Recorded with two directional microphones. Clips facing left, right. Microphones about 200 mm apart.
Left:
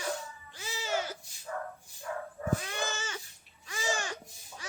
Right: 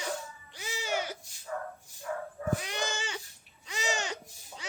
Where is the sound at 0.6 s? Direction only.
15° right (ahead or behind).